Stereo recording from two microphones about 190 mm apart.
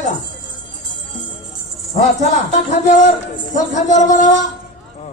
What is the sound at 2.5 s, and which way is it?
Speech, 40° left (ahead or behind).